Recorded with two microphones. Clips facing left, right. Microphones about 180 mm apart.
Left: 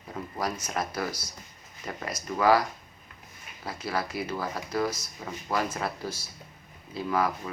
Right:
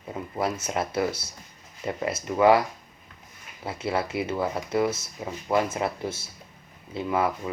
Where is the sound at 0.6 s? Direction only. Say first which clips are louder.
Right 5 dB; 25° right (ahead or behind).